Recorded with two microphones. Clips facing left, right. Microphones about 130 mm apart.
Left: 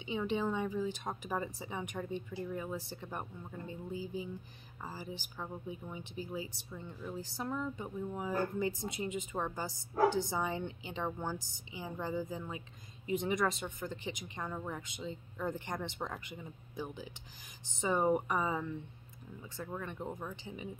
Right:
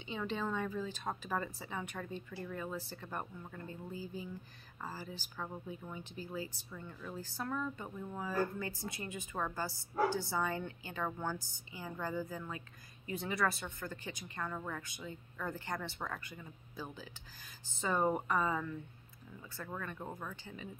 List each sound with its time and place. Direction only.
0.0 s speech: 15° left (ahead or behind)